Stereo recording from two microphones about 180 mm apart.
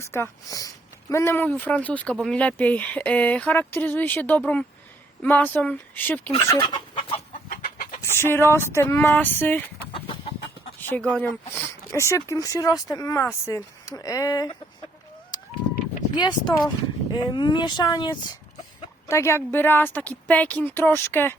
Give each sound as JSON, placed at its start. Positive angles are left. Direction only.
{"t": 0.0, "sound": "speech", "side_deg": 15}
{"t": 6.5, "sound": "chicken", "side_deg": 25}
{"t": 7.5, "sound": "chicken", "side_deg": 50}
{"t": 8.0, "sound": "speech", "side_deg": 15}
{"t": 10.8, "sound": "speech", "side_deg": 10}
{"t": 15.3, "sound": "fowl", "side_deg": 20}
{"t": 16.1, "sound": "speech", "side_deg": 25}